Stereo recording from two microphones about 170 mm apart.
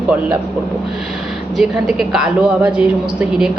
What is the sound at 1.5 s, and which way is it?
A woman's voice, 5° right (ahead or behind).